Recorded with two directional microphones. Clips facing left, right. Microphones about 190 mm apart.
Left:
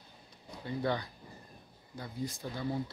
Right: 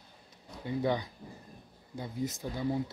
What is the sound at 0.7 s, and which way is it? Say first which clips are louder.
Speech: right 3 dB; 15° right (ahead or behind).